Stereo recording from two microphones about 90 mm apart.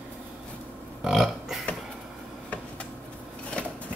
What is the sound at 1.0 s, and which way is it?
Speech, 5° right (ahead or behind).